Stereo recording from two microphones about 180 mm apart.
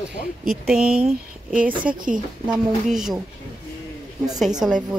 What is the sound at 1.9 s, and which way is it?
Speech, 45° right (ahead or behind).